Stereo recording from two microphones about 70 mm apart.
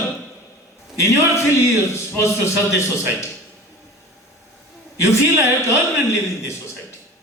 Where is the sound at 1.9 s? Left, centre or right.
Left.